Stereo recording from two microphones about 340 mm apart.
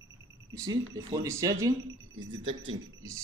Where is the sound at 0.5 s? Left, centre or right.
Centre.